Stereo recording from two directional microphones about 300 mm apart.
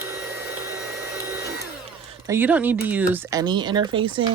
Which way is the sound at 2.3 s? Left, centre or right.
Centre.